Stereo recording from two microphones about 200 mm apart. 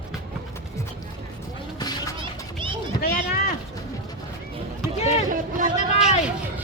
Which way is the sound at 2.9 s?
50° left (ahead or behind).